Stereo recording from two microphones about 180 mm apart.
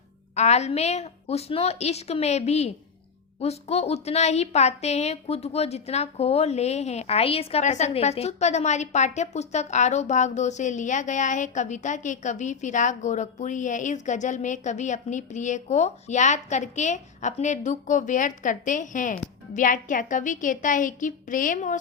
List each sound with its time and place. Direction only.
0.3 s a woman's voice: 40° left (ahead or behind)